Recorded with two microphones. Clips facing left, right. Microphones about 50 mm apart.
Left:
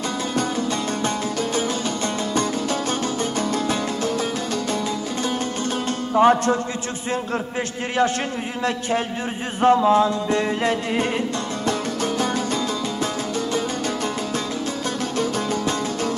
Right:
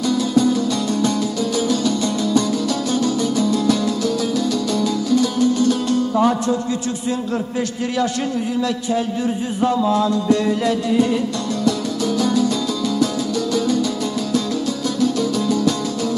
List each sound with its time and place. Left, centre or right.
0.3 s music: left
9.6 s music: left
15.0 s music: left